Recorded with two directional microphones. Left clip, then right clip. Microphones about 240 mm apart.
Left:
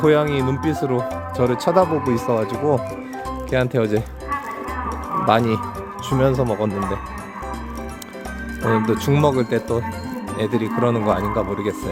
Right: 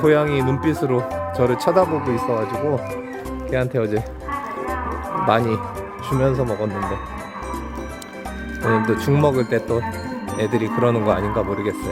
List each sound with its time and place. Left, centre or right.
0.0 s speech: centre
3.5 s speech: centre
5.2 s speech: centre
8.7 s speech: centre